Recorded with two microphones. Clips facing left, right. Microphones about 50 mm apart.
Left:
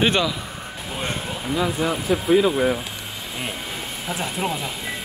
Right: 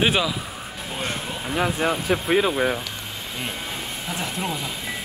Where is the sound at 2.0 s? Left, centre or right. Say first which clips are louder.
Left 5 dB; right.